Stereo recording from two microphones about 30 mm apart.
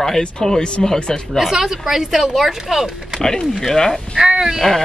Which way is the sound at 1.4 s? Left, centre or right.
Centre.